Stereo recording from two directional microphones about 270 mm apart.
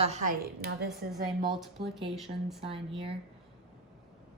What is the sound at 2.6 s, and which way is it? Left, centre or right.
Speech, centre.